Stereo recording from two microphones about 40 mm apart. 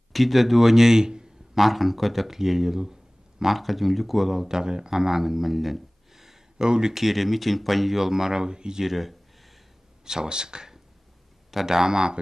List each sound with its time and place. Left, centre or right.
0.1 s speech: centre
1.5 s speech: centre
6.6 s speech: right
6.9 s speech: centre
8.8 s speech: centre
10.0 s speech: centre